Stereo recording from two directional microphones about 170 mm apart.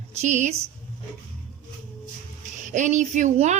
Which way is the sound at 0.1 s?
45° right (ahead or behind).